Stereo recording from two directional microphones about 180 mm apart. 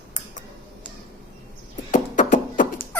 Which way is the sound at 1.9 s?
45° left (ahead or behind).